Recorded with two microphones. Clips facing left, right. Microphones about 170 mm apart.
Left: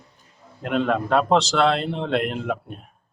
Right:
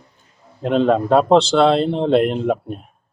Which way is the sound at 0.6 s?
30° right (ahead or behind).